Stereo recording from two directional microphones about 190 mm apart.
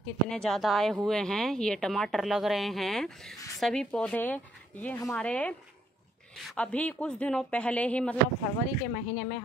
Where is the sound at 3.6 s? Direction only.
5° left (ahead or behind).